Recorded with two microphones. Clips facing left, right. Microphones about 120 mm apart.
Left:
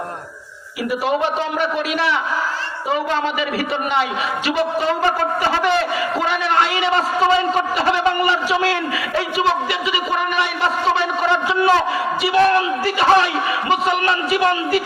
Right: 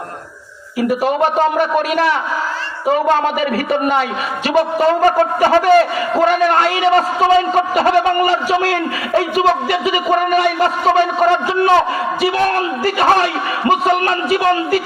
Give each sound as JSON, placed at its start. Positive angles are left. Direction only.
{"t": 0.8, "sound": "a man's voice", "side_deg": -45}